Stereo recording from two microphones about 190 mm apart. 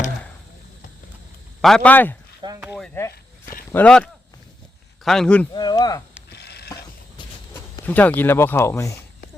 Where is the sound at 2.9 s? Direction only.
15° left (ahead or behind).